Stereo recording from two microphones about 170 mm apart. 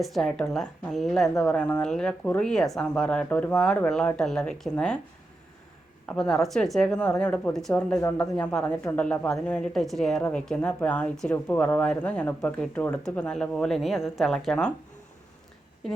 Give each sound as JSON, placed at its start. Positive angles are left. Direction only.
{"t": 0.0, "sound": "speech", "side_deg": 0}
{"t": 6.1, "sound": "speech", "side_deg": 5}
{"t": 7.9, "sound": "speech", "side_deg": 20}
{"t": 8.4, "sound": "speech", "side_deg": 5}